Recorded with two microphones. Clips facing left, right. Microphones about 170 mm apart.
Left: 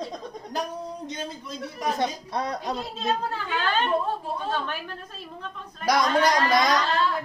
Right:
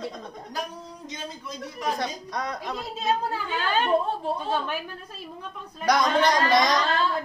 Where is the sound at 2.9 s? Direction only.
10° right (ahead or behind).